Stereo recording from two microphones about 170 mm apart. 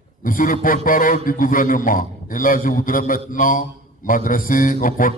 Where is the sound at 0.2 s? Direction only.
55° left (ahead or behind).